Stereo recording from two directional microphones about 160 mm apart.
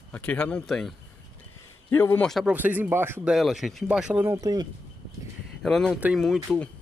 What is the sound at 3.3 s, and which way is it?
Speech, centre (ahead or behind).